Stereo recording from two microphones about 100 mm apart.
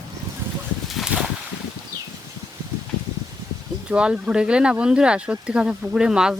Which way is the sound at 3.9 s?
10° right (ahead or behind).